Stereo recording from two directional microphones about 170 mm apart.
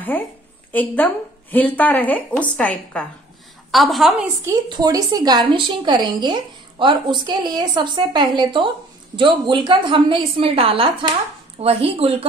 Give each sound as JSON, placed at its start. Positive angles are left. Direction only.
{"t": 0.7, "sound": "a woman's voice", "side_deg": 10}
{"t": 4.5, "sound": "a woman's voice", "side_deg": -25}